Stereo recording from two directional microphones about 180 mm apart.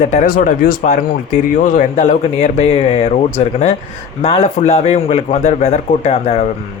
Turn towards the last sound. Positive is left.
turn(degrees=35)  # may be behind; listen again after turning